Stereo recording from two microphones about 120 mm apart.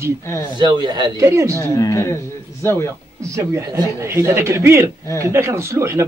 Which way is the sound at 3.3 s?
25° right (ahead or behind).